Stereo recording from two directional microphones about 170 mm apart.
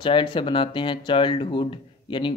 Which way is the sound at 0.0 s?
30° left (ahead or behind).